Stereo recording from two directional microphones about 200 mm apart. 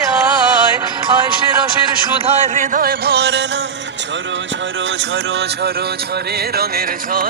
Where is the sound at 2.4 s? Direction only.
40° right (ahead or behind); by 3.4 s 55° right (ahead or behind).